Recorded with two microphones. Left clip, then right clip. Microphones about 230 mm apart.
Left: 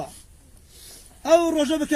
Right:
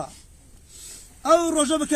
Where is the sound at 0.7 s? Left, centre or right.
Right.